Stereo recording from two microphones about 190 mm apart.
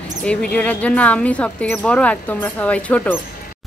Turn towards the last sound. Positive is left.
turn(degrees=5)  # may be behind; listen again after turning